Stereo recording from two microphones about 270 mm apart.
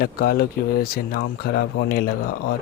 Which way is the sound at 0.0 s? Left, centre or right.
Left.